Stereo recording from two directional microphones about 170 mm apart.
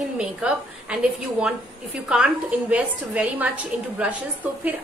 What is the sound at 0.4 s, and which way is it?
Speech, 5° right (ahead or behind).